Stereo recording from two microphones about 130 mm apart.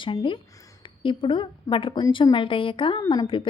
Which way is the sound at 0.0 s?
40° left (ahead or behind).